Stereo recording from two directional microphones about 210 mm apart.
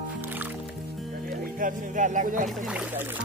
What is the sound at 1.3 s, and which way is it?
Speech, 40° right (ahead or behind).